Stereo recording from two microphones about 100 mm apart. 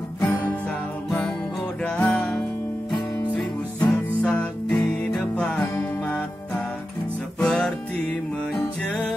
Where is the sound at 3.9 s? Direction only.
10° left (ahead or behind).